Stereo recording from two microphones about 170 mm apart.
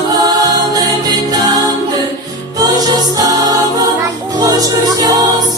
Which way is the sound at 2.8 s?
20° right (ahead or behind).